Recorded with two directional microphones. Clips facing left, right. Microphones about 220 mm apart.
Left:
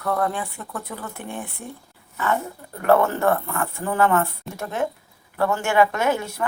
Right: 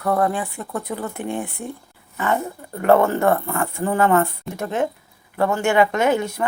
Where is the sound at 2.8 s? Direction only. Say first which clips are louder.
Right 2 dB; 15° right (ahead or behind).